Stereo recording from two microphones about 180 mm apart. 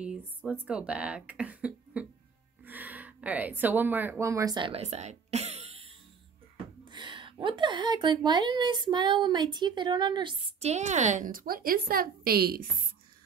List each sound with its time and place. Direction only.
0.7 s a woman's voice: 5° right (ahead or behind); by 12.6 s 60° right (ahead or behind)